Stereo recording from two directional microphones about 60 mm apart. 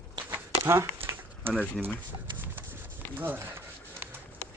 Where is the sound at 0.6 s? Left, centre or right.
Right.